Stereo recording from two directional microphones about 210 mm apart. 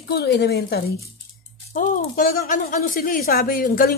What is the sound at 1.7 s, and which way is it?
A woman's voice, 40° left (ahead or behind).